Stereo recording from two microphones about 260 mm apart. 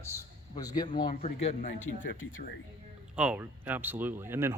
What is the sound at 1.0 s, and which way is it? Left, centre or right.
Speech, left.